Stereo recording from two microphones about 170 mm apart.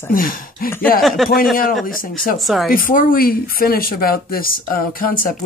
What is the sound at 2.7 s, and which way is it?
Speech, 55° left (ahead or behind).